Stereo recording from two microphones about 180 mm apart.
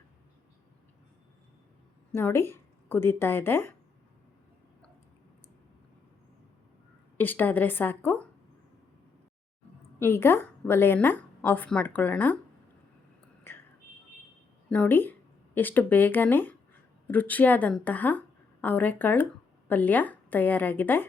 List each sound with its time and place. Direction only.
2.1 s speech: 15° left (ahead or behind)
7.2 s a woman's voice: 10° left (ahead or behind)
10.0 s a woman's voice: 15° left (ahead or behind)
14.7 s a woman's voice: 10° left (ahead or behind)